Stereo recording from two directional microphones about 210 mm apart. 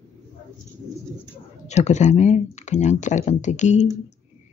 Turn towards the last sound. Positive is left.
turn(degrees=35)  # may be behind; listen again after turning